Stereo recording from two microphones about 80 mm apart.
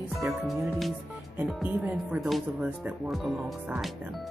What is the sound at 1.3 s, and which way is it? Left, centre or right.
Speech, centre.